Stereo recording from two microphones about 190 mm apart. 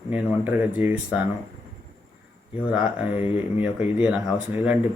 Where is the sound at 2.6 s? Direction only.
10° right (ahead or behind).